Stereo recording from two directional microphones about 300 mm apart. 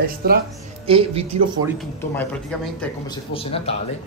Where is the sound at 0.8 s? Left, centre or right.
Centre.